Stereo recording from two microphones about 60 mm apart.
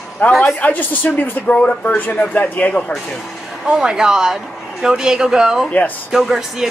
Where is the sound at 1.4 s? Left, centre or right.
Left.